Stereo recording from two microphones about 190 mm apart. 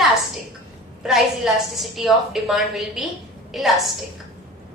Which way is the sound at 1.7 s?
Centre (ahead or behind).